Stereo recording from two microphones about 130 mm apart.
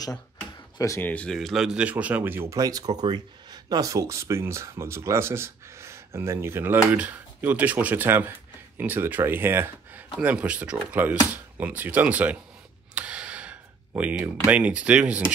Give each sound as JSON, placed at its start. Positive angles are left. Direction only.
{"t": 0.7, "sound": "speech", "side_deg": 25}
{"t": 1.0, "sound": "speech", "side_deg": 10}
{"t": 12.9, "sound": "a sound", "side_deg": -10}
{"t": 14.5, "sound": "speech", "side_deg": -10}